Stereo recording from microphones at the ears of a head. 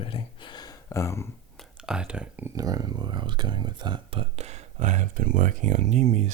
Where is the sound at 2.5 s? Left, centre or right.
Right.